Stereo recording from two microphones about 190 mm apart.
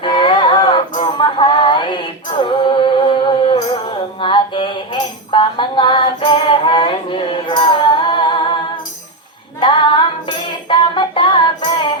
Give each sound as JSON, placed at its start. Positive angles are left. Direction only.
{"t": 0.0, "sound": "a sound", "side_deg": 25}
{"t": 2.4, "sound": "music", "side_deg": 25}
{"t": 9.6, "sound": "female singing", "side_deg": 25}
{"t": 10.7, "sound": "music", "side_deg": 25}